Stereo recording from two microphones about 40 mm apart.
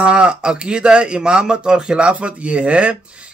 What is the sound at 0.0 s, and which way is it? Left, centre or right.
A man's voice, right.